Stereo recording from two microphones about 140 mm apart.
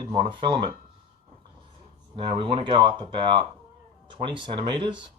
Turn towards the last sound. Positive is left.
turn(degrees=-35)  # may be behind; listen again after turning